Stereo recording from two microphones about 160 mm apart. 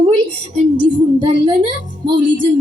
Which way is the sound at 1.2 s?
30° right (ahead or behind).